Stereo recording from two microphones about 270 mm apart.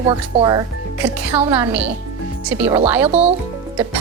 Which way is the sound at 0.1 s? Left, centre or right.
Centre.